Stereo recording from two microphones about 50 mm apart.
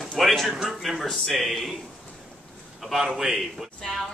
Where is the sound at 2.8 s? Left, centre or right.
Centre.